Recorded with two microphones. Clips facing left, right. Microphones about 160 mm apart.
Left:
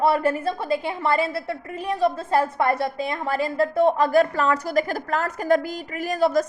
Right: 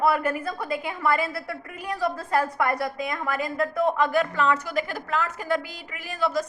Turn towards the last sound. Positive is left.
turn(degrees=40)  # may be behind; listen again after turning